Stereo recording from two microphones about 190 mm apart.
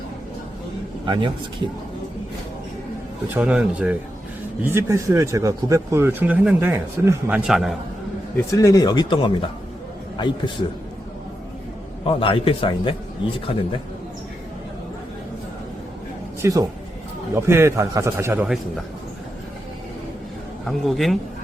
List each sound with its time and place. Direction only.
1.0 s a man's voice: 25° right (ahead or behind)
3.3 s speech: 5° right (ahead or behind)
8.4 s speech: 15° left (ahead or behind)
12.0 s speech: 30° left (ahead or behind)
16.4 s speech: 15° right (ahead or behind)
20.7 s speech: centre (ahead or behind)